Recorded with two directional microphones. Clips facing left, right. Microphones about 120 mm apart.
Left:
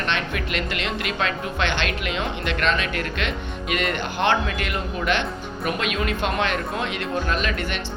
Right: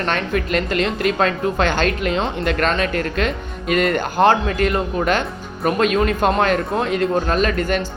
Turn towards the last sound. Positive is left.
turn(degrees=-40)  # may be behind; listen again after turning